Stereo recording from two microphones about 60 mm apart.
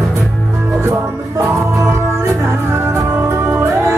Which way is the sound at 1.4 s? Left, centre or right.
Right.